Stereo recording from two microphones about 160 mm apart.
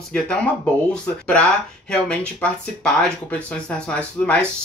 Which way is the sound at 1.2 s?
5° left (ahead or behind).